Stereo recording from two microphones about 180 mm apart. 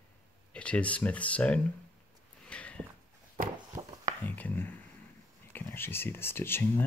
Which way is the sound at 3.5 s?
20° right (ahead or behind).